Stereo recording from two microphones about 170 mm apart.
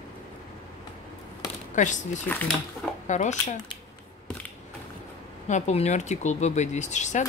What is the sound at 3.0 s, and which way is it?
Speech, 45° left (ahead or behind).